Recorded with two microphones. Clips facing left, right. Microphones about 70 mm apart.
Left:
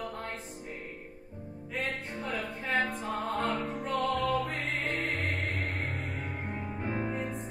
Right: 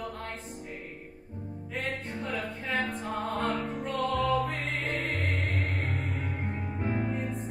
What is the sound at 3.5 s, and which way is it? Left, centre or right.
Music, right.